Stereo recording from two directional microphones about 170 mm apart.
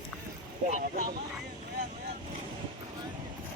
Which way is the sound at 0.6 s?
50° right (ahead or behind).